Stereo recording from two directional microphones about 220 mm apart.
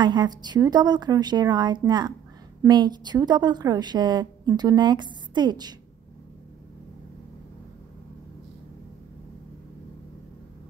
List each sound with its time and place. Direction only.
0.0 s a woman's voice: 20° right (ahead or behind)